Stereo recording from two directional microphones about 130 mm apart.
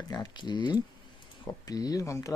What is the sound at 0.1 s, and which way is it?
Speech, 35° left (ahead or behind).